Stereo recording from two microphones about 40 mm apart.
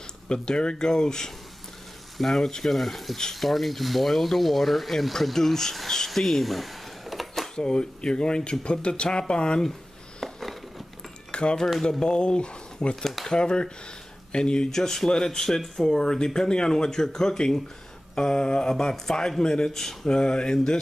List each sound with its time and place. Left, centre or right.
0.3 s speech: left
5.9 s a sound: centre
7.5 s speech: left
10.2 s a sound: centre
11.3 s speech: left
13.0 s speech: centre
13.3 s speech: left
14.7 s speech: centre
20.1 s speech: left